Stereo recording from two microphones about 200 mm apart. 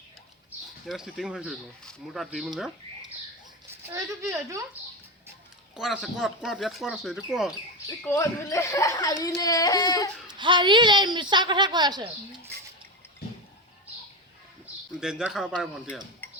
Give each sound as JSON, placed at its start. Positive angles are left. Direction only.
{"t": 0.9, "sound": "speech", "side_deg": 0}
{"t": 3.9, "sound": "speech", "side_deg": -15}
{"t": 5.7, "sound": "speech", "side_deg": 0}
{"t": 7.9, "sound": "speech", "side_deg": 15}
{"t": 10.2, "sound": "a woman's voice", "side_deg": -25}
{"t": 14.9, "sound": "speech", "side_deg": -5}